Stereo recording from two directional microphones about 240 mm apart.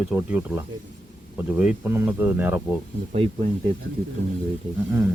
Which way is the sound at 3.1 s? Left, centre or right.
Right.